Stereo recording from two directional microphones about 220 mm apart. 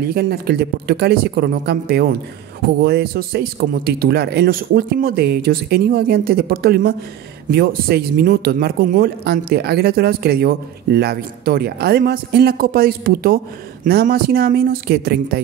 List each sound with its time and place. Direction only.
0.0 s speech: 45° right (ahead or behind)